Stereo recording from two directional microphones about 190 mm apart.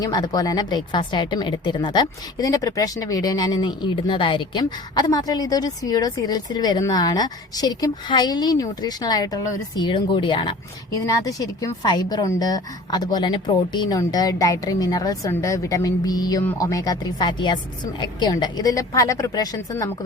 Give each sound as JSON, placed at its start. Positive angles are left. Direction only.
{"t": 0.0, "sound": "a woman's voice", "side_deg": 20}